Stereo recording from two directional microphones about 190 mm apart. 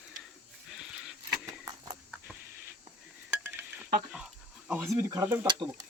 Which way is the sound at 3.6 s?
5° right (ahead or behind).